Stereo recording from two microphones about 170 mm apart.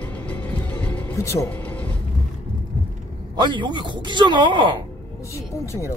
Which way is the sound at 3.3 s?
30° right (ahead or behind).